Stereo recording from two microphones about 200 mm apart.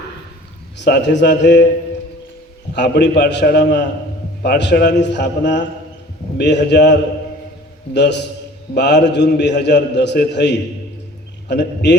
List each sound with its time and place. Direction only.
0.8 s a man's voice: 60° left (ahead or behind)
2.7 s a man's voice: 60° left (ahead or behind)